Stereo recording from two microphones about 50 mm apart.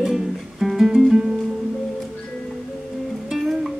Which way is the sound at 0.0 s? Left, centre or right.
Centre.